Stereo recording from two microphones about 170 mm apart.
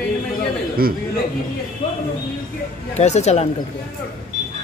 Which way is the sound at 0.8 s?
60° right (ahead or behind).